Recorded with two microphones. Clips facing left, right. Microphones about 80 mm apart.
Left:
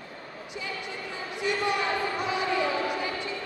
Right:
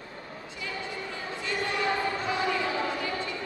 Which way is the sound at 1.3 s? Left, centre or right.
Centre.